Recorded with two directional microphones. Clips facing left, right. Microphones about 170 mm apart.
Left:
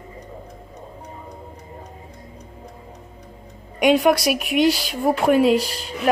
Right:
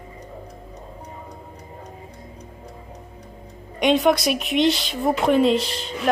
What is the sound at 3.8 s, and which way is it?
Speech, 10° left (ahead or behind).